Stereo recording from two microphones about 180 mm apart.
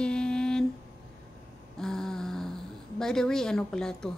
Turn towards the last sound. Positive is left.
turn(degrees=5)  # may be behind; listen again after turning